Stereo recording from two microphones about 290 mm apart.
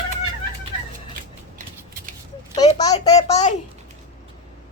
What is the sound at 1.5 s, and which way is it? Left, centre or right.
Scissors, right.